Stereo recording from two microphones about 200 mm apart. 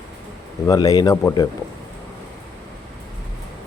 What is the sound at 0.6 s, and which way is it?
Speech, 15° left (ahead or behind).